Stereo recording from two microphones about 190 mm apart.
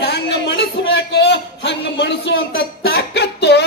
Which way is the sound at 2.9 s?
60° left (ahead or behind).